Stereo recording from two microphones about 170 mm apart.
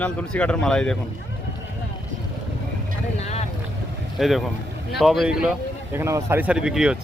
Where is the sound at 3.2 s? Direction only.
40° left (ahead or behind).